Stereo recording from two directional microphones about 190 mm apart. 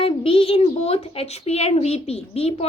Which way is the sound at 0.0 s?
30° left (ahead or behind).